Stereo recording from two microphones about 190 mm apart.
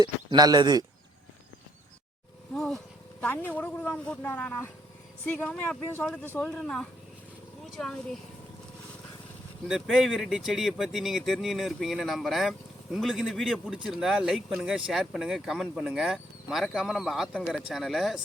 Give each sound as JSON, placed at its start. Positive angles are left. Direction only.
{"t": 0.0, "sound": "speech", "side_deg": -20}
{"t": 2.6, "sound": "speech", "side_deg": 0}
{"t": 9.6, "sound": "speech", "side_deg": -5}